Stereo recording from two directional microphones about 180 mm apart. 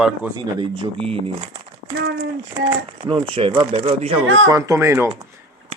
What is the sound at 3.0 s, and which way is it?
Speech, 30° right (ahead or behind).